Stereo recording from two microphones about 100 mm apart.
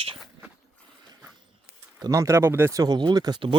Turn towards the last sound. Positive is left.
turn(degrees=-45)  # may be behind; listen again after turning